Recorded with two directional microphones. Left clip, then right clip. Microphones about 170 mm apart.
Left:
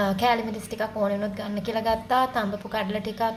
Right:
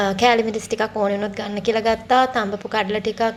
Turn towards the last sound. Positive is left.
turn(degrees=-20)  # may be behind; listen again after turning